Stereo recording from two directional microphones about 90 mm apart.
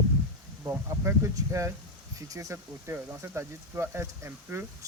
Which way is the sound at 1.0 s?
35° right (ahead or behind).